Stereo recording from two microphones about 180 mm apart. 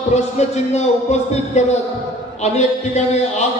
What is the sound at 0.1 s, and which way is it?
Speech, 40° left (ahead or behind).